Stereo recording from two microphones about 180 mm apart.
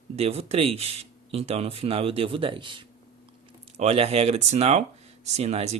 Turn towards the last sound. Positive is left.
turn(degrees=-35)  # may be behind; listen again after turning